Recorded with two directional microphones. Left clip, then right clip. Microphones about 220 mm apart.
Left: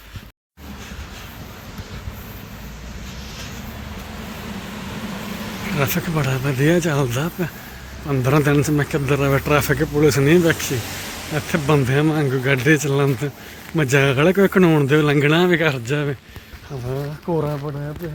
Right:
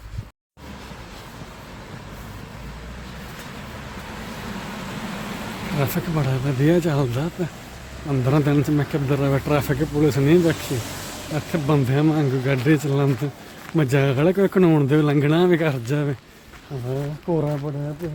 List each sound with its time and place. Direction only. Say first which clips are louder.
5.8 s speech: left 3 dB; 5° right (ahead or behind)
17.2 s speech: left 1 dB; 15° left (ahead or behind)